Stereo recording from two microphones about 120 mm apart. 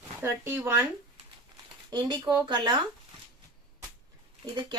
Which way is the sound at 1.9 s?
35° right (ahead or behind).